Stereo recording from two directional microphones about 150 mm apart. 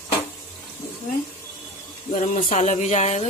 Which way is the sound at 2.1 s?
50° left (ahead or behind).